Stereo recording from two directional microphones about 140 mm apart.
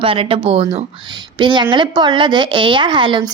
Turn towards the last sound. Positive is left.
turn(degrees=-35)  # may be behind; listen again after turning